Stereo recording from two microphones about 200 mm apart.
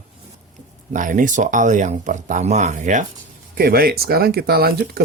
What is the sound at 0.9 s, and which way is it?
Speech, 40° right (ahead or behind).